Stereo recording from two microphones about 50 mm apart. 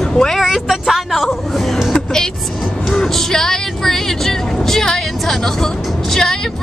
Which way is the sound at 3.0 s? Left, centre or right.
Centre.